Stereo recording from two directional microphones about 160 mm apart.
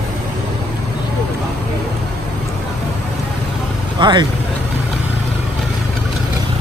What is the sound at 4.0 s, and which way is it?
Speech, 30° right (ahead or behind).